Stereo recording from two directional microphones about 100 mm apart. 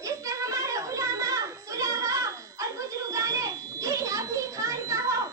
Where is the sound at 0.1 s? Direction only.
35° right (ahead or behind).